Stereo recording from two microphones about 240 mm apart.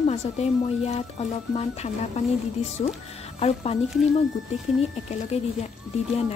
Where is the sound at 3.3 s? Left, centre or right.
Left.